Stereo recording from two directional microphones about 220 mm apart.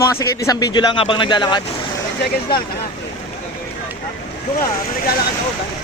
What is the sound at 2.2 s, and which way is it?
Speech, 45° left (ahead or behind).